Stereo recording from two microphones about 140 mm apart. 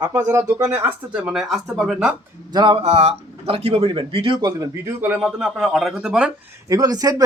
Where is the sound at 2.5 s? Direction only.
35° right (ahead or behind).